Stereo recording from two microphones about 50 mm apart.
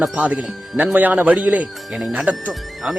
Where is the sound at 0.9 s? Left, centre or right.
Right.